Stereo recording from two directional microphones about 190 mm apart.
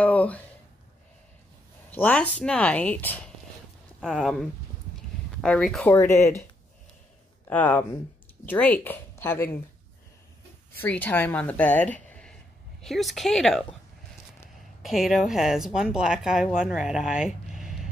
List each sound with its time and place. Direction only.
0.0 s a sound: 10° left (ahead or behind)
1.9 s speech: 10° left (ahead or behind)
4.0 s speech: centre (ahead or behind)
5.9 s speech: 15° left (ahead or behind)
7.4 s speech: 10° left (ahead or behind)
10.8 s a woman's voice: 10° left (ahead or behind)
14.8 s speech: centre (ahead or behind)